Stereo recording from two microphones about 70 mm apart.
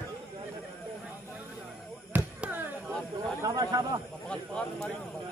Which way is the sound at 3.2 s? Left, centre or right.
Right.